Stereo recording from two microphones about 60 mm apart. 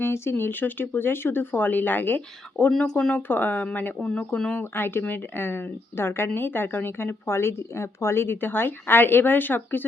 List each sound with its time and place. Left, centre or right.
0.0 s a woman's voice: left
2.7 s speech: centre
3.2 s a woman's voice: left
4.6 s a woman's voice: left